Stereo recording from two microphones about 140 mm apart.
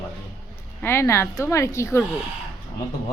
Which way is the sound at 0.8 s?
15° left (ahead or behind).